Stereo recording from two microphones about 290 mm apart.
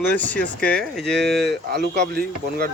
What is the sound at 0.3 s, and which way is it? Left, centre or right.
Speech, centre.